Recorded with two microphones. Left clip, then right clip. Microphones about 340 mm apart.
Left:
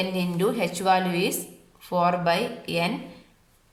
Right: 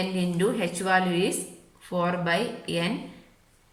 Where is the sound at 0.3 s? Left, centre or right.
Centre.